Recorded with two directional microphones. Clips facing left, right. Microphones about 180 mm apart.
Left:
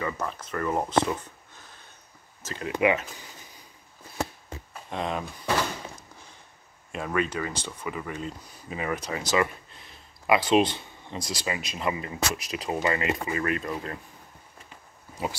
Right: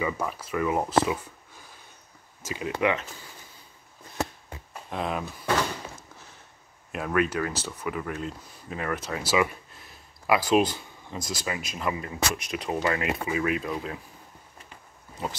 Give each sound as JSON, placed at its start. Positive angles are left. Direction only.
{"t": 0.0, "sound": "speech", "side_deg": -10}
{"t": 2.8, "sound": "speech", "side_deg": 10}
{"t": 4.8, "sound": "speech", "side_deg": -5}
{"t": 6.9, "sound": "speech", "side_deg": -5}